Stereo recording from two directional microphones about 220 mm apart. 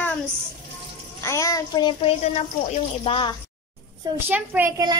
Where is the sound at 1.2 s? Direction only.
15° left (ahead or behind).